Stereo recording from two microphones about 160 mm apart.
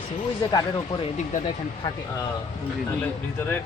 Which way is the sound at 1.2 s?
45° left (ahead or behind).